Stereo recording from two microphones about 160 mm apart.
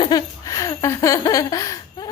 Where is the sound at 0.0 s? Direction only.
25° left (ahead or behind).